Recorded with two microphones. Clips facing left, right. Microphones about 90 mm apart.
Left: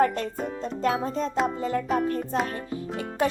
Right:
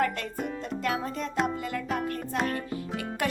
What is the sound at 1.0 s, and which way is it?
Speech, 35° left (ahead or behind).